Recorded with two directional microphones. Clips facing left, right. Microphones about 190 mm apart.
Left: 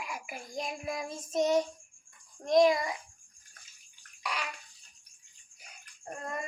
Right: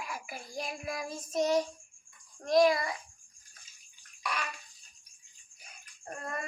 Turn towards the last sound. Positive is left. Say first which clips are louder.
# left 1 dB
turn(degrees=20)  # may be behind; listen again after turning